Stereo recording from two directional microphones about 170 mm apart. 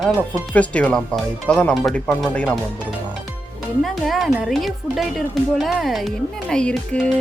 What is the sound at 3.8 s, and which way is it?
Speech, centre (ahead or behind).